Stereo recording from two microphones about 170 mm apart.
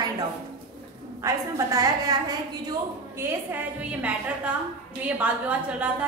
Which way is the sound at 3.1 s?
10° right (ahead or behind).